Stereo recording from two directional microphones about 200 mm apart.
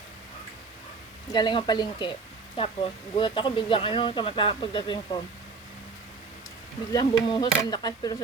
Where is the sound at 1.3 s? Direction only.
20° left (ahead or behind).